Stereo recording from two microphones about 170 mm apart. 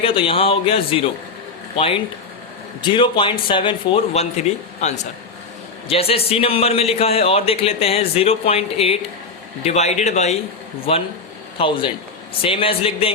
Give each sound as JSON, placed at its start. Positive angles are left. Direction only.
{"t": 0.0, "sound": "a man's voice", "side_deg": 30}